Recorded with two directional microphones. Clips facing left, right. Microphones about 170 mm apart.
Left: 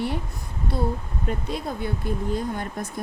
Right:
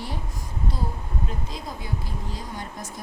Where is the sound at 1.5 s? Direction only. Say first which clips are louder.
Left 6 dB; 65° left (ahead or behind).